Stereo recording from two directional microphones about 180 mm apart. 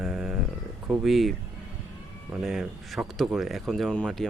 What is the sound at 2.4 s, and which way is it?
Speech, centre (ahead or behind).